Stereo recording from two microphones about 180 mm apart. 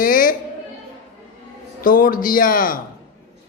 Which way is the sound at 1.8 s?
50° left (ahead or behind).